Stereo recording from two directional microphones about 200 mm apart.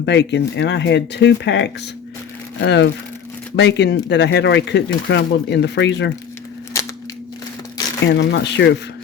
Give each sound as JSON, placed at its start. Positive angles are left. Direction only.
{"t": 0.0, "sound": "speech", "side_deg": 60}
{"t": 8.0, "sound": "speech", "side_deg": 60}